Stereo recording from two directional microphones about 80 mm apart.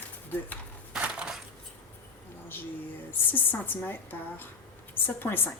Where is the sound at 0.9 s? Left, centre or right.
Centre.